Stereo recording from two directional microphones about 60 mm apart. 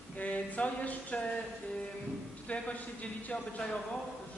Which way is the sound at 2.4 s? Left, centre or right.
Left.